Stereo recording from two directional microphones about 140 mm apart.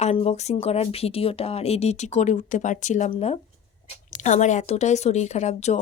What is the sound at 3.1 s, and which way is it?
Speech, 45° left (ahead or behind).